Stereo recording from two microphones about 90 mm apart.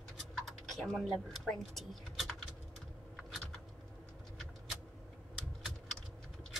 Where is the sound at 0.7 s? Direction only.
Centre (ahead or behind).